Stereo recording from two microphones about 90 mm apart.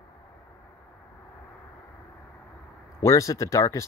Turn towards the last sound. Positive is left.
turn(degrees=35)  # may be behind; listen again after turning